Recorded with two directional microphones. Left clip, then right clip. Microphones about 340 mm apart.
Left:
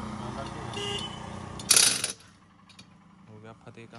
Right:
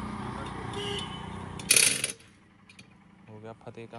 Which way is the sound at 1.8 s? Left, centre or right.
Centre.